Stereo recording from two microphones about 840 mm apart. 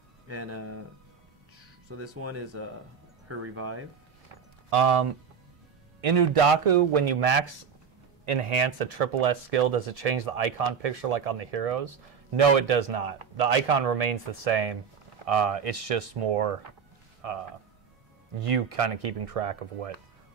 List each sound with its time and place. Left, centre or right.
0.3 s speech: centre
1.9 s speech: centre
4.6 s speech: right
5.9 s a man's voice: right
18.4 s a man's voice: right